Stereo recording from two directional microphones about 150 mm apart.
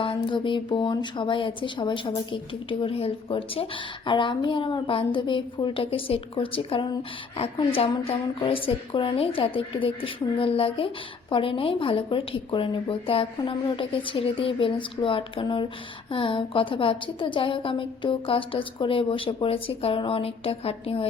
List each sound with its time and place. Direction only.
0.0 s a woman's voice: 35° left (ahead or behind)